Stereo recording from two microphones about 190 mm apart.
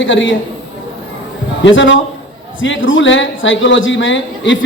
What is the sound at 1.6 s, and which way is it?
Speech, 75° left (ahead or behind).